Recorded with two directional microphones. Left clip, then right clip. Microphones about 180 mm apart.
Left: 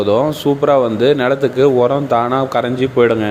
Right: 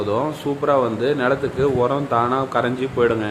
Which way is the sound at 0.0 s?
35° left (ahead or behind).